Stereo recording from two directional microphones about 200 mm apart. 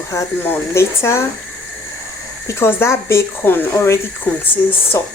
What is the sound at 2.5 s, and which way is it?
Speech, 10° left (ahead or behind).